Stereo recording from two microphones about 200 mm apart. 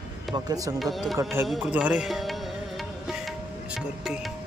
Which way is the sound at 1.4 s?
Centre (ahead or behind).